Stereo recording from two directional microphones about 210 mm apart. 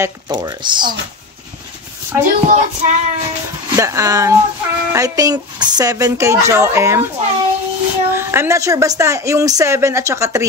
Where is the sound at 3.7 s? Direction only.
15° right (ahead or behind).